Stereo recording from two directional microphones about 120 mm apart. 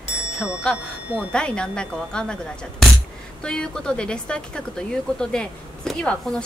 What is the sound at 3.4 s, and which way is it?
Speech, 5° left (ahead or behind).